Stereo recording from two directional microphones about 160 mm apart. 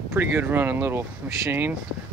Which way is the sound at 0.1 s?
15° right (ahead or behind).